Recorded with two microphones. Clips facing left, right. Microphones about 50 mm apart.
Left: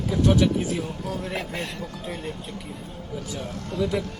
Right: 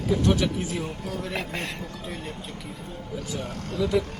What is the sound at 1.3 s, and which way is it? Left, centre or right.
Speech, right.